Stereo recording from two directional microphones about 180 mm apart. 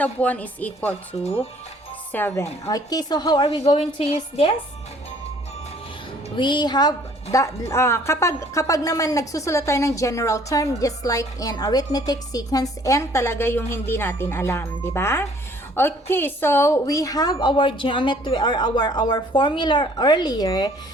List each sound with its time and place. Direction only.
0.0 s a woman's voice: 10° left (ahead or behind)
2.1 s a woman's voice: 15° left (ahead or behind); by 4.5 s 30° left (ahead or behind)
6.3 s a woman's voice: 25° left (ahead or behind)